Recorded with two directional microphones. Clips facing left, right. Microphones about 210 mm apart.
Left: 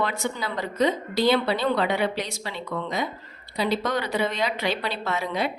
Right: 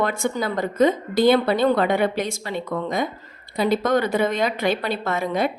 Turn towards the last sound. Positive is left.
turn(degrees=-50)  # may be behind; listen again after turning